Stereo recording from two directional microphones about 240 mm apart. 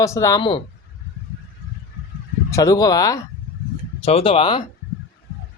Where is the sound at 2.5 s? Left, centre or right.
Centre.